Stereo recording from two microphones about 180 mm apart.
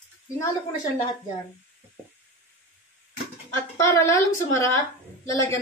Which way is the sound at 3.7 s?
15° left (ahead or behind).